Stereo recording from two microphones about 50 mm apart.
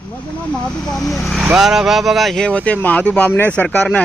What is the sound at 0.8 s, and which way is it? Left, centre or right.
Speech, centre.